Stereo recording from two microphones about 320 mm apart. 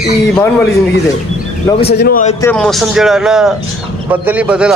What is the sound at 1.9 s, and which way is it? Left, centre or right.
Speech, left.